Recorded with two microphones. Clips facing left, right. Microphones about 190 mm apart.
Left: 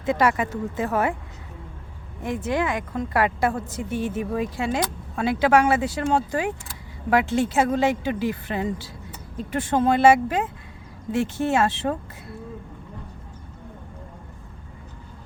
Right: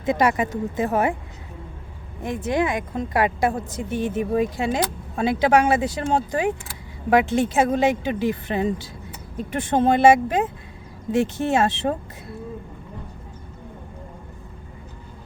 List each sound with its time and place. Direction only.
0.0 s a woman's voice: 15° right (ahead or behind)
2.2 s a woman's voice: 15° right (ahead or behind)